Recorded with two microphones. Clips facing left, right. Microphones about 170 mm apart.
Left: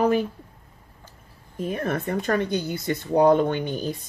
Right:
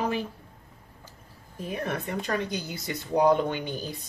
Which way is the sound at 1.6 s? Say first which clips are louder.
Left 5 dB; 50° left (ahead or behind).